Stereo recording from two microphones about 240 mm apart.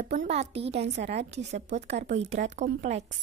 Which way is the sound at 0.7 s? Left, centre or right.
Right.